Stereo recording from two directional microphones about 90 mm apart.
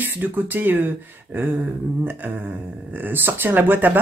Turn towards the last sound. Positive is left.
turn(degrees=-20)  # may be behind; listen again after turning